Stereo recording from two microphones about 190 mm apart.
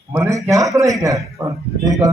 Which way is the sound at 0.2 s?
15° right (ahead or behind).